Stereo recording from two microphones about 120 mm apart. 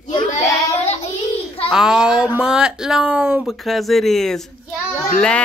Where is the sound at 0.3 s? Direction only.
65° left (ahead or behind).